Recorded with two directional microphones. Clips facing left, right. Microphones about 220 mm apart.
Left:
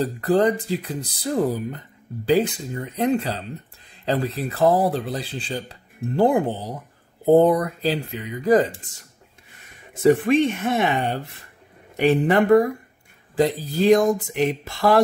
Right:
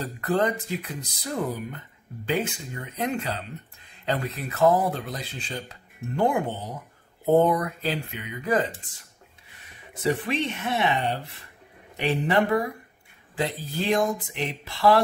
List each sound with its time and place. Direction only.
0.0 s speech: 35° left (ahead or behind)
10.0 s speech: 45° left (ahead or behind)
12.0 s speech: 45° left (ahead or behind)